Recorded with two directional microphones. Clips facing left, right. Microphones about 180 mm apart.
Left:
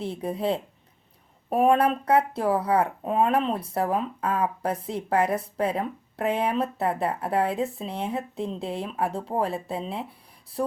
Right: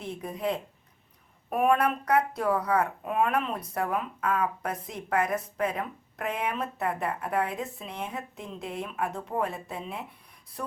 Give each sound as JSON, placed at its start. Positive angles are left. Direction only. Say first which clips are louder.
{"t": 0.0, "sound": "speech", "louder": "left 4 dB", "side_deg": 35}